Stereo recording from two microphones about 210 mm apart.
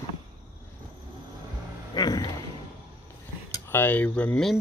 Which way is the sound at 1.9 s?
20° left (ahead or behind).